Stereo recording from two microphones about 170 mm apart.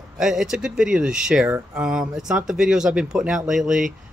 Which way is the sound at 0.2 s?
5° right (ahead or behind).